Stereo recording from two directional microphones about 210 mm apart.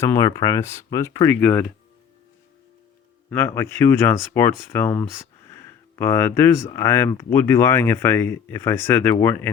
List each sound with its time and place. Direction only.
0.0 s speech: 15° left (ahead or behind)
3.2 s speech: 10° left (ahead or behind)